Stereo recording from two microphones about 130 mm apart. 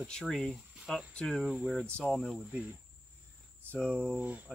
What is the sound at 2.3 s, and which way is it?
Speech, 5° right (ahead or behind).